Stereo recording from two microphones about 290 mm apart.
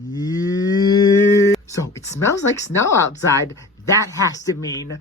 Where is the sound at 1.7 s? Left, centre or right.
Centre.